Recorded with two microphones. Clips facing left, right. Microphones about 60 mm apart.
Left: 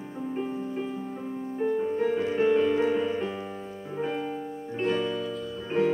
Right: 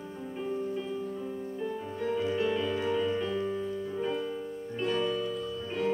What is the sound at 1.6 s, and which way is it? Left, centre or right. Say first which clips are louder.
Music: left 9 dB; left.